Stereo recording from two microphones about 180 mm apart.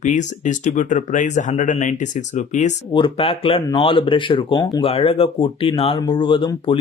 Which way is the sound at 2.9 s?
30° left (ahead or behind).